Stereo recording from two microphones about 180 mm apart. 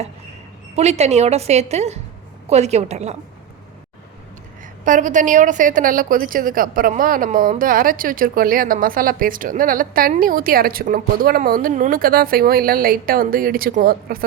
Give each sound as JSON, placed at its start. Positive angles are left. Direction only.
{"t": 0.8, "sound": "a woman's voice", "side_deg": -35}
{"t": 4.9, "sound": "a woman's voice", "side_deg": -45}